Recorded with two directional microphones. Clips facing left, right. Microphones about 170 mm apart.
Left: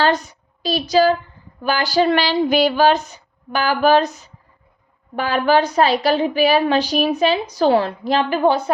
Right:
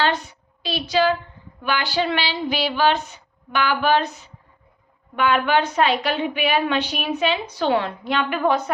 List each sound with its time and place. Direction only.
0.0 s a woman's voice: 40° left (ahead or behind)